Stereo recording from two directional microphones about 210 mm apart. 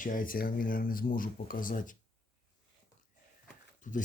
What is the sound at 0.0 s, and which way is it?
Speech, 40° left (ahead or behind).